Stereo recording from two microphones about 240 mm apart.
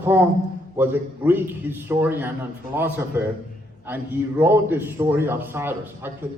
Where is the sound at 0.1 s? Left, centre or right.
Centre.